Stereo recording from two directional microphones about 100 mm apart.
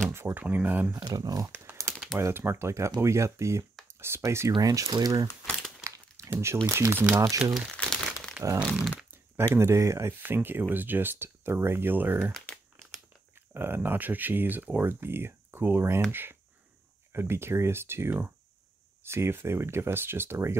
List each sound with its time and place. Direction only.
0.1 s speech: 20° right (ahead or behind)
0.9 s speech: 40° right (ahead or behind)
1.5 s crumpling: 20° right (ahead or behind)
2.1 s speech: 25° right (ahead or behind)
4.6 s speech: 35° right (ahead or behind)
5.9 s crumpling: 30° right (ahead or behind)
6.7 s speech: 25° right (ahead or behind)
7.7 s crumpling: 5° left (ahead or behind)
9.6 s speech: 30° right (ahead or behind)